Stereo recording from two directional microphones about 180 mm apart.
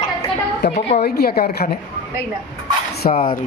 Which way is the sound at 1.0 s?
60° left (ahead or behind).